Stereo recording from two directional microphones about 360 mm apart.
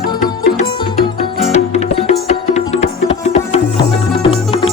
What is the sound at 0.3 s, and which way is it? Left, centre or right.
Music, centre.